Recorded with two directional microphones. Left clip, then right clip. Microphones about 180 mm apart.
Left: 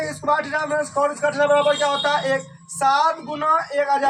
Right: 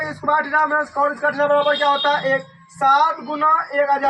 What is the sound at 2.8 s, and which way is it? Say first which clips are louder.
Speech: right 3 dB; 30° left (ahead or behind).